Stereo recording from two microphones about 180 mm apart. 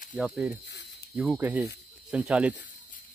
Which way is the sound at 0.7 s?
70° left (ahead or behind).